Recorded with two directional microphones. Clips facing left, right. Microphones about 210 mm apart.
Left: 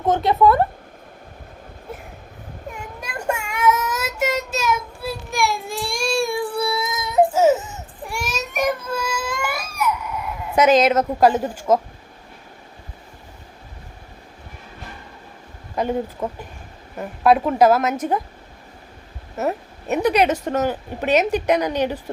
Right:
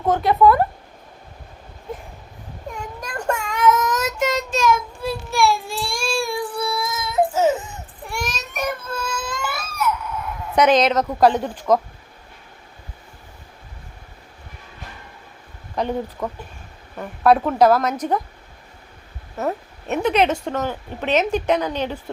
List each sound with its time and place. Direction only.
0.1 s speech: 25° left (ahead or behind)
3.0 s child singing: 10° left (ahead or behind)
8.0 s baby cry: 10° left (ahead or behind)
10.5 s a woman's voice: 5° left (ahead or behind)
15.7 s speech: 5° left (ahead or behind)
17.0 s speech: 5° left (ahead or behind)
19.4 s speech: 5° left (ahead or behind)
20.3 s speech: 15° left (ahead or behind)